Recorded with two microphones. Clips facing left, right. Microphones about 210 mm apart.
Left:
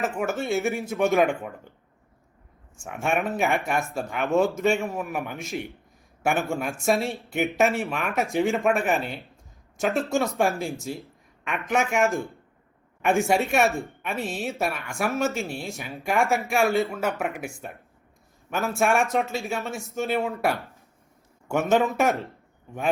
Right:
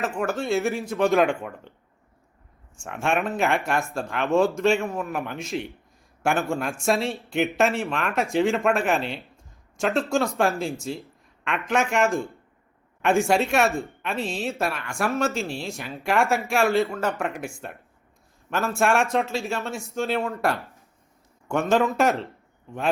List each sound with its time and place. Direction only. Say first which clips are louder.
0.3 s speech: right 3 dB; centre (ahead or behind)
2.7 s speech: right 1 dB; 5° left (ahead or behind)
18.5 s speech: right 1 dB; centre (ahead or behind)